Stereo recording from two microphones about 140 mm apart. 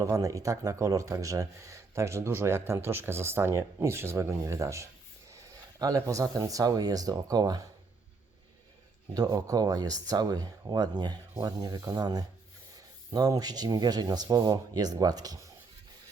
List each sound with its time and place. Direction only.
0.0 s speech: 25° right (ahead or behind)
9.1 s speech: 25° right (ahead or behind)